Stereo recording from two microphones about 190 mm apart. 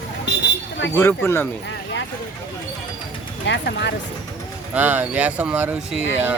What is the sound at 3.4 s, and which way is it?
Speech, 65° left (ahead or behind).